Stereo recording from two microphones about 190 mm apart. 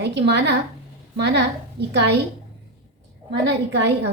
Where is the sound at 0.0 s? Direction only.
65° right (ahead or behind).